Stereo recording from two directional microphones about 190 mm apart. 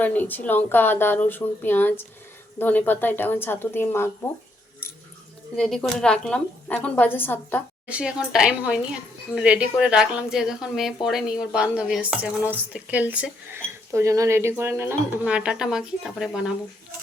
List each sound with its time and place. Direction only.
0.0 s speech: 10° left (ahead or behind)
5.5 s speech: centre (ahead or behind)
7.9 s speech: 5° right (ahead or behind)